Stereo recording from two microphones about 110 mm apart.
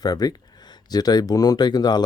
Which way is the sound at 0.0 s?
35° left (ahead or behind).